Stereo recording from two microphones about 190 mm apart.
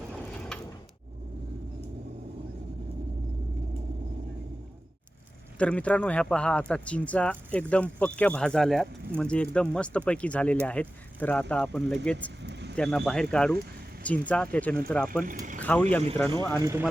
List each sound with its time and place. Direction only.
0.1 s vehicle: 5° left (ahead or behind)
5.5 s speech: 5° left (ahead or behind)
12.4 s vehicle: 65° right (ahead or behind)
12.7 s speech: 5° left (ahead or behind)
15.2 s speech: 45° right (ahead or behind)
15.6 s speech: 10° left (ahead or behind)
16.6 s speech: 15° right (ahead or behind)